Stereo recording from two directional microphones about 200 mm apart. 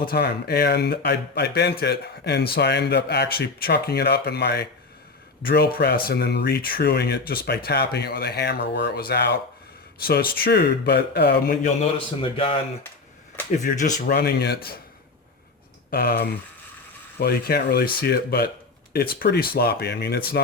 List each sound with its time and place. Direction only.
0.1 s speech: 55° left (ahead or behind)
11.6 s a man's voice: 30° left (ahead or behind)
13.6 s speech: 40° left (ahead or behind)
15.9 s speech: 50° left (ahead or behind)